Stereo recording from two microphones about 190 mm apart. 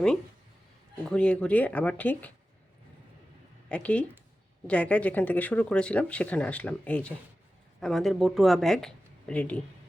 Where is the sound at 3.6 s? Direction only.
5° left (ahead or behind).